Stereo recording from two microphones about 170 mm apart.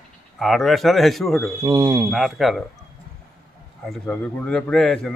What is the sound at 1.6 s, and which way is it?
Speech, 25° right (ahead or behind).